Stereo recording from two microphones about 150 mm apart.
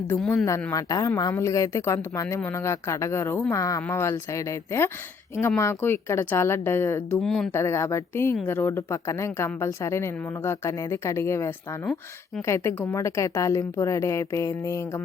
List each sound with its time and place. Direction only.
0.7 s a woman's voice: 25° left (ahead or behind)
7.2 s speech: centre (ahead or behind)
7.5 s a woman's voice: 15° left (ahead or behind)